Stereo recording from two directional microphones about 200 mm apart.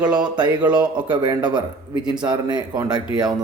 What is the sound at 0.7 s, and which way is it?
Speech, 25° right (ahead or behind).